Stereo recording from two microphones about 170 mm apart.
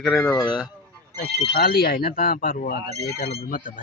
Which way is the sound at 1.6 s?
65° left (ahead or behind).